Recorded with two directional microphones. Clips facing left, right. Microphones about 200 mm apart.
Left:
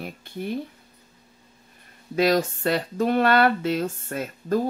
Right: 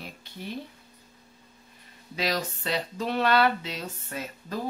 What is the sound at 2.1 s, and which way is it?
Speech, 50° left (ahead or behind).